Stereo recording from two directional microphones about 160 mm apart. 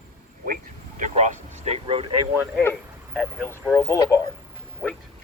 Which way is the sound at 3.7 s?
20° left (ahead or behind).